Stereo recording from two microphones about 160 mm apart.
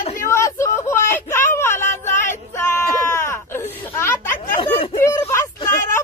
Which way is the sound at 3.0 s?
15° left (ahead or behind).